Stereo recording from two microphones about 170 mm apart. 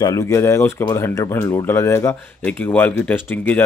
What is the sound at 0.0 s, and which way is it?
A man's voice, 20° left (ahead or behind).